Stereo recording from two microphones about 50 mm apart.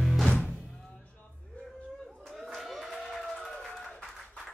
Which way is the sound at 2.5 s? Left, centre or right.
Centre.